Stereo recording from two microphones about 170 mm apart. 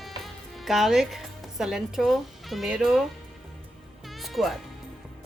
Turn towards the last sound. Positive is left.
turn(degrees=0)  # may be behind; listen again after turning